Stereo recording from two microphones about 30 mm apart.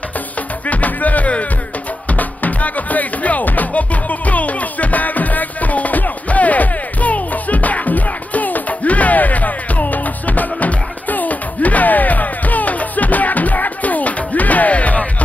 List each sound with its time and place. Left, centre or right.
0.7 s music: left